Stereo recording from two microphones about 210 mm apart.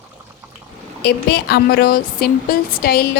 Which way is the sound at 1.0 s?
50° left (ahead or behind).